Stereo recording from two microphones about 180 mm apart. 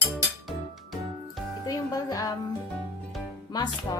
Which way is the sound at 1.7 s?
20° left (ahead or behind).